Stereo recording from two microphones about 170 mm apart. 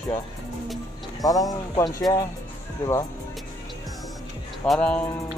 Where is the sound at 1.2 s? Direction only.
20° left (ahead or behind).